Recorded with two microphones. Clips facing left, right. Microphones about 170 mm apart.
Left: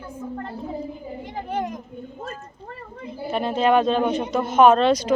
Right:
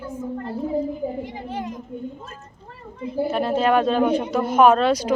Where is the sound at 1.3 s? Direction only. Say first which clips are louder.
Left 3 dB; 60° left (ahead or behind).